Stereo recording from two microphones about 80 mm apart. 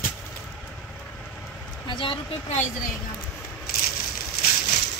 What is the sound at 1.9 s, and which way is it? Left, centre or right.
Speech, left.